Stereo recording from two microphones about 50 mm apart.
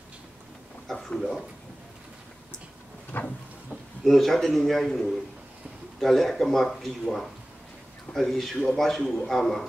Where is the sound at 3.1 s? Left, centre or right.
Left.